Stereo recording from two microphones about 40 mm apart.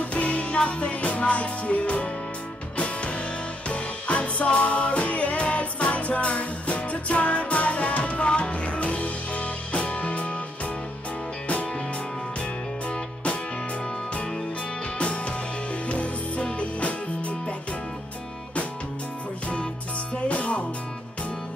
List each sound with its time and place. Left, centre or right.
0.0 s music: left
12.9 s music: left
15.0 s music: left
20.2 s music: left